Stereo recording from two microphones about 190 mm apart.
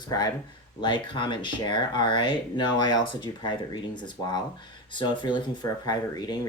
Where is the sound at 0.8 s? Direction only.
25° left (ahead or behind).